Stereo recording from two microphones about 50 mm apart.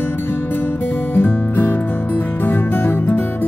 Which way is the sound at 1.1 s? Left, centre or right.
Left.